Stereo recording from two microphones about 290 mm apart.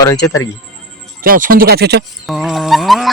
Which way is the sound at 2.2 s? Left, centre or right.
Centre.